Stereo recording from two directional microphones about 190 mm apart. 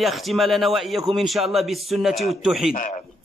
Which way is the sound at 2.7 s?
40° left (ahead or behind).